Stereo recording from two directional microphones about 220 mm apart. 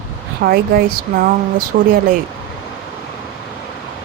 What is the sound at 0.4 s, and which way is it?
Speech, 40° right (ahead or behind).